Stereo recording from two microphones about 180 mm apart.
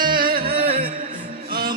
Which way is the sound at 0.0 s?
50° right (ahead or behind).